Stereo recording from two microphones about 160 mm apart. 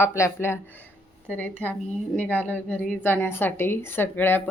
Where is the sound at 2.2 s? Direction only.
10° left (ahead or behind).